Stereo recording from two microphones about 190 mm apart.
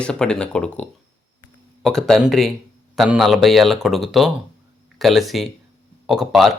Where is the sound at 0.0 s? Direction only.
5° left (ahead or behind).